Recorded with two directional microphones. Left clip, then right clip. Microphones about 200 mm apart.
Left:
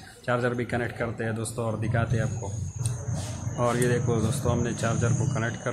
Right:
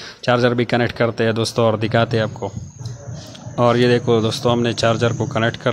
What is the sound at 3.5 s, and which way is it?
Speech, 40° right (ahead or behind).